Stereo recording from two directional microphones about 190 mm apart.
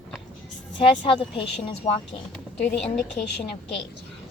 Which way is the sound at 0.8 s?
25° left (ahead or behind).